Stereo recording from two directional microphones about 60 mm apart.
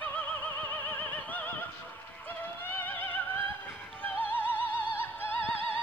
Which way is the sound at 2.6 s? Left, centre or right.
Left.